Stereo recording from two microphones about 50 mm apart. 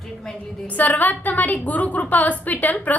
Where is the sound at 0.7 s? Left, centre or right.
Left.